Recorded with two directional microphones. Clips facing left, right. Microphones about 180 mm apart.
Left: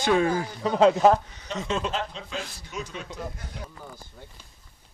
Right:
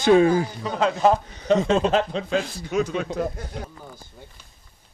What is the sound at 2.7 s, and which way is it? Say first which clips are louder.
Speech: right 14 dB; 80° right.